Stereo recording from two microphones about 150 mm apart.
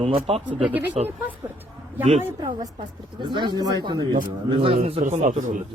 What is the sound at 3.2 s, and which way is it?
Speech, 30° right (ahead or behind).